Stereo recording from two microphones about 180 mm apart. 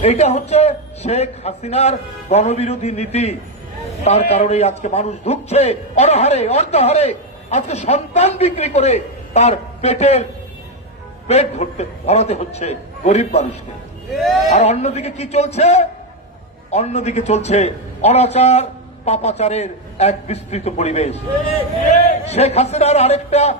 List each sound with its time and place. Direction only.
0.0 s a man's voice: 35° left (ahead or behind)
11.3 s a man's voice: 35° left (ahead or behind)
14.1 s speech: centre (ahead or behind)
14.5 s a man's voice: 35° left (ahead or behind)
22.2 s a man's voice: 35° left (ahead or behind)